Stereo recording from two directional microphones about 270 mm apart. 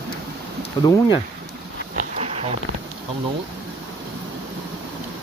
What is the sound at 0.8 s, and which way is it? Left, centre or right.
Speech, centre.